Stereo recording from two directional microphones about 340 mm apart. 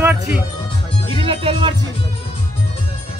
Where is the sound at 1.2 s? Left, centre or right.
Centre.